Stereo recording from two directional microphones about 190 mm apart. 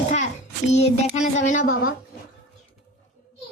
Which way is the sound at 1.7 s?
90° left.